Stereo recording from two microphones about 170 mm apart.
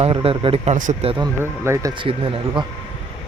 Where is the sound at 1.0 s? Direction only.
25° right (ahead or behind).